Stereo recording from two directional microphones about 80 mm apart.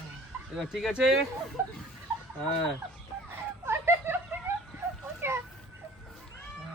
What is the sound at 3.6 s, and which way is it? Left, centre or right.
Laughter, right.